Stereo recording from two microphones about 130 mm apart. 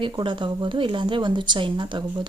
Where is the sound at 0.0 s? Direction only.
40° right (ahead or behind).